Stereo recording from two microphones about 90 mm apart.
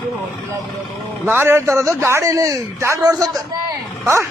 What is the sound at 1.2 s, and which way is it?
A man's voice, 25° right (ahead or behind).